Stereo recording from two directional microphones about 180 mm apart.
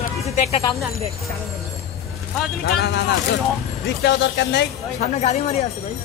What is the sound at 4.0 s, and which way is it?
Speech, 75° left (ahead or behind).